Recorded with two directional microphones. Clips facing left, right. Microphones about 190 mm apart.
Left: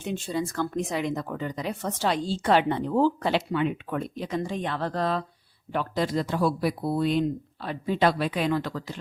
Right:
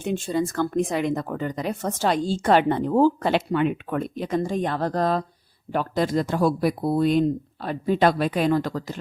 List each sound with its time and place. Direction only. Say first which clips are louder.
0.0 s speech: right 5 dB; 50° right (ahead or behind)